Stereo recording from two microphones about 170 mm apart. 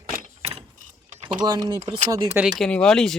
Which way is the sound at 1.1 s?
40° right (ahead or behind).